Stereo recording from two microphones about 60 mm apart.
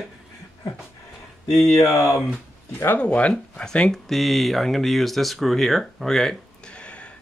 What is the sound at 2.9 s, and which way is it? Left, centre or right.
Speech, centre.